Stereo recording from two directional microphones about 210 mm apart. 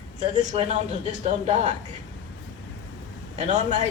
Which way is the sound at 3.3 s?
35° right (ahead or behind).